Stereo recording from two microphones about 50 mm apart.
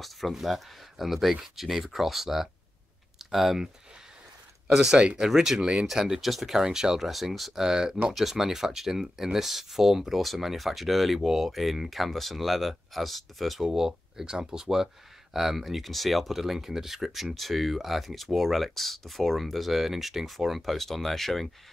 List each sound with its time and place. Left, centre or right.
0.0 s speech: centre
4.7 s speech: centre